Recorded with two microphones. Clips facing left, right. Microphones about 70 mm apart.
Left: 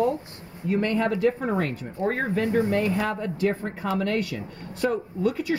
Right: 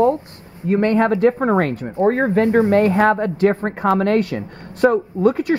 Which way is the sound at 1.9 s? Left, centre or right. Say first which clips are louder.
Right 10 dB; right.